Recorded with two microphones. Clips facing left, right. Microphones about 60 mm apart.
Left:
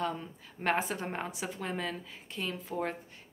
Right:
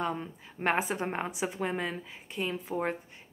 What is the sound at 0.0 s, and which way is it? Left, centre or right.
A woman's voice, right.